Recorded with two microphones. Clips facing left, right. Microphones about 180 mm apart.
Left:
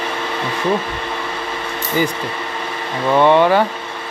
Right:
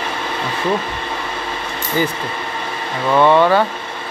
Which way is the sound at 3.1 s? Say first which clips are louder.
Even; 15° left (ahead or behind).